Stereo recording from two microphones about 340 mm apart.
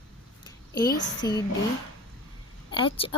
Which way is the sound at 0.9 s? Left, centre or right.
Left.